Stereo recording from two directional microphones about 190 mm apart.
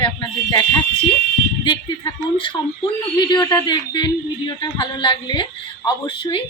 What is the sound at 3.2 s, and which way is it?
A man's voice, 25° left (ahead or behind).